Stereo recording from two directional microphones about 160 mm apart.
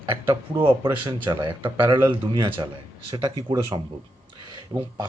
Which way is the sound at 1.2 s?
30° right (ahead or behind).